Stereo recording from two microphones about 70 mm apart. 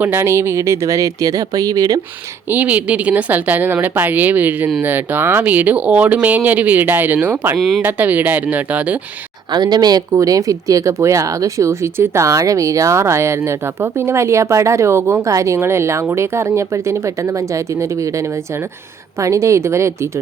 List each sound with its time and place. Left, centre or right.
0.0 s speech: right
2.5 s speech: right
9.5 s speech: right
10.2 s speech: right